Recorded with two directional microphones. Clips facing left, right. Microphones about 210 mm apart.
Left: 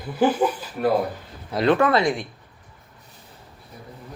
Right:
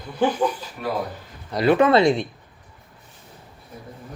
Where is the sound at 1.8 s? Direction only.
25° right (ahead or behind).